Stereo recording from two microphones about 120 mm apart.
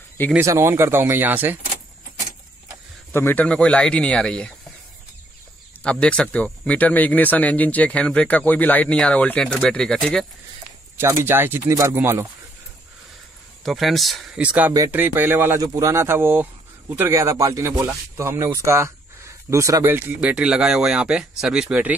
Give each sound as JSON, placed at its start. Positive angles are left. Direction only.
{"t": 0.4, "sound": "speech", "side_deg": -25}
{"t": 3.1, "sound": "speech", "side_deg": 20}
{"t": 5.9, "sound": "speech", "side_deg": 10}
{"t": 11.0, "sound": "speech", "side_deg": -20}
{"t": 13.7, "sound": "speech", "side_deg": 0}
{"t": 14.4, "sound": "speech", "side_deg": -10}
{"t": 15.6, "sound": "speech", "side_deg": -30}
{"t": 20.2, "sound": "speech", "side_deg": -10}